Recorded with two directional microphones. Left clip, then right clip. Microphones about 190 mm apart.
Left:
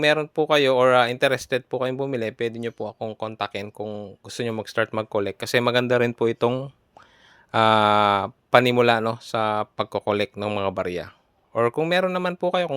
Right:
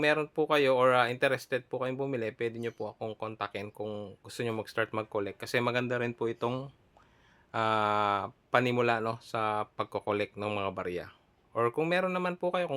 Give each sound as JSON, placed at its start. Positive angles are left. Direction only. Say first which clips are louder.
{"t": 0.0, "sound": "speech", "louder": "left 7 dB", "side_deg": 35}
{"t": 3.8, "sound": "speech", "louder": "left 6 dB", "side_deg": 30}